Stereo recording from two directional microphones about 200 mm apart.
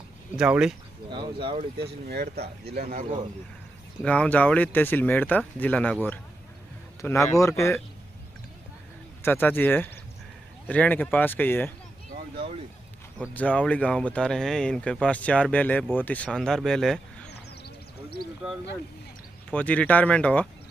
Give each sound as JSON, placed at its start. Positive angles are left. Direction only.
{"t": 0.4, "sound": "speech", "side_deg": -5}
{"t": 1.1, "sound": "speech", "side_deg": -25}
{"t": 1.8, "sound": "speech", "side_deg": -55}
{"t": 4.0, "sound": "speech", "side_deg": 5}
{"t": 7.0, "sound": "speech", "side_deg": 15}
{"t": 9.2, "sound": "speech", "side_deg": 10}
{"t": 13.3, "sound": "speech", "side_deg": 10}
{"t": 19.5, "sound": "speech", "side_deg": 5}